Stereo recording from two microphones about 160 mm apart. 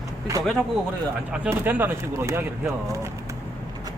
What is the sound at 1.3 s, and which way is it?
A man's voice, 10° right (ahead or behind).